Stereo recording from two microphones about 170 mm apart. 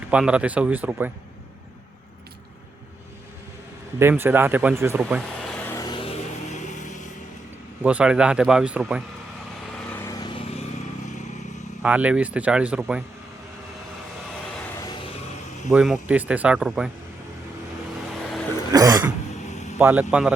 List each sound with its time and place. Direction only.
0.1 s speech: 5° right (ahead or behind)
4.0 s speech: 10° right (ahead or behind)
5.4 s vehicle: 5° left (ahead or behind)
5.7 s music: 25° left (ahead or behind)
6.1 s vehicle: 45° left (ahead or behind)
7.8 s speech: 10° right (ahead or behind)
9.9 s vehicle: 15° left (ahead or behind)
11.8 s speech: 10° right (ahead or behind)
15.7 s speech: 5° right (ahead or behind)
18.7 s throat clearing: 20° right (ahead or behind)
19.5 s a sound: 45° left (ahead or behind)
19.8 s speech: 10° right (ahead or behind)